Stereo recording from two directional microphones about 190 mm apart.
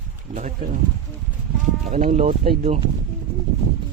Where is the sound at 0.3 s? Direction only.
40° right (ahead or behind).